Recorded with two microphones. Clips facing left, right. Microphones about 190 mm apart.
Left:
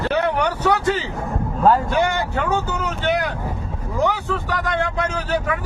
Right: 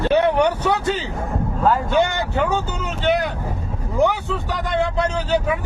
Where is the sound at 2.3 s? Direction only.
20° right (ahead or behind).